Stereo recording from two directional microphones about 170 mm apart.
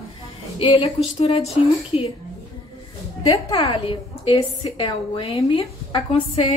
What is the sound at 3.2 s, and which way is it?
A woman's voice, 30° left (ahead or behind).